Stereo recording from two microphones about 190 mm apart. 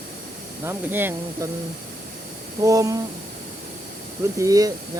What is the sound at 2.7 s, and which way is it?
Speech, 20° right (ahead or behind).